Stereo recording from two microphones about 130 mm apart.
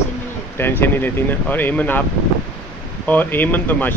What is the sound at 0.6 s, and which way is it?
Speech, 15° left (ahead or behind).